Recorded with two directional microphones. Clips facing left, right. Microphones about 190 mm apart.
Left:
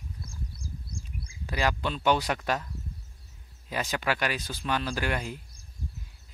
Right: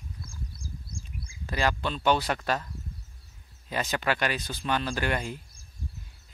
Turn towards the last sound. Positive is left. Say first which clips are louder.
# right 1 dB
turn(degrees=5)  # may be behind; listen again after turning